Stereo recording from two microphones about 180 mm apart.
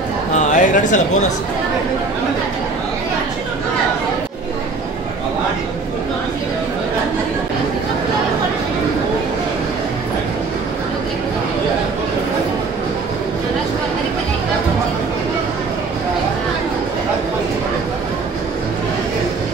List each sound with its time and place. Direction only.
0.5 s speech: 45° left (ahead or behind)